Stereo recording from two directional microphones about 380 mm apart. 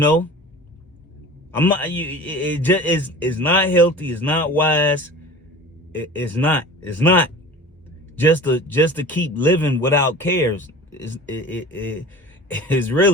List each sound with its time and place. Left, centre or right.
0.0 s a man's voice: centre
1.5 s a man's voice: centre
6.1 s a man's voice: centre